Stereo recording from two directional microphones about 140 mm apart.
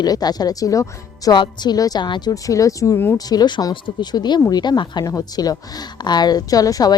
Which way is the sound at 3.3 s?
30° left (ahead or behind).